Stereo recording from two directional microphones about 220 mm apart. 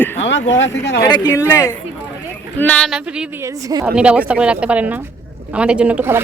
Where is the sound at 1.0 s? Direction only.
15° left (ahead or behind); by 3.5 s 5° right (ahead or behind).